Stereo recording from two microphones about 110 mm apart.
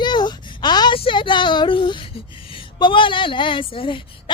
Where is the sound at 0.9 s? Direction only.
50° left (ahead or behind).